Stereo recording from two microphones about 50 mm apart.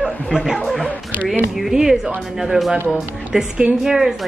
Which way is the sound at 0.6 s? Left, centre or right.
Centre.